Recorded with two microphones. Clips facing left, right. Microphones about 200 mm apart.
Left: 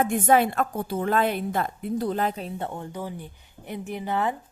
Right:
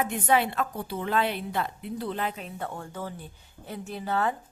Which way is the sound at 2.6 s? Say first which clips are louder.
Left 3 dB; 20° left (ahead or behind).